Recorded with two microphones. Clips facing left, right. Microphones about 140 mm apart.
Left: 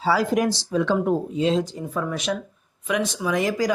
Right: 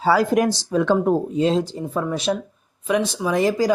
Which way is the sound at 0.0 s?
50° right (ahead or behind).